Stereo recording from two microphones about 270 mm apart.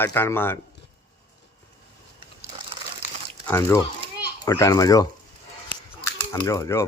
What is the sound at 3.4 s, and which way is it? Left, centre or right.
Speech, centre.